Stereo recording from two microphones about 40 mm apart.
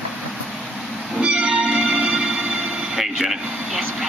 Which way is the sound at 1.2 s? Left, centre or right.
Right.